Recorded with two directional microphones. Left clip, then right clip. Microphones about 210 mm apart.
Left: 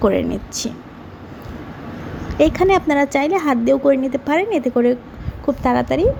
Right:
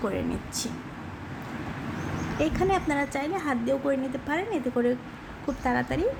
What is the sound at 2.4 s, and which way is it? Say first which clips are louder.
A woman's voice: left 12 dB; 30° left (ahead or behind).